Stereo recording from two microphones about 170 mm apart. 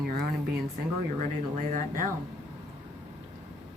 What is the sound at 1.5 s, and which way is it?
Speech, 50° right (ahead or behind).